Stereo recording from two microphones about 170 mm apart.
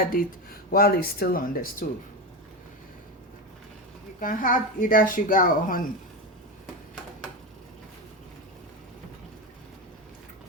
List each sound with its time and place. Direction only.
0.0 s speech: 60° left (ahead or behind)
4.2 s speech: 55° left (ahead or behind)